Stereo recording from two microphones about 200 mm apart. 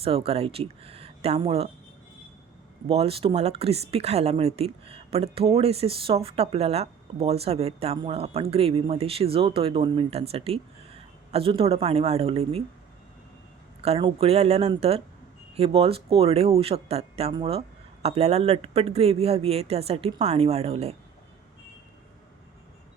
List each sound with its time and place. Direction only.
0.0 s speech: 30° right (ahead or behind)
2.8 s speech: 30° right (ahead or behind)
13.8 s speech: 30° right (ahead or behind)